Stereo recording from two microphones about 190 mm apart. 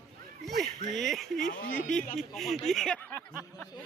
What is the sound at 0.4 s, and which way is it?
Speech, centre (ahead or behind).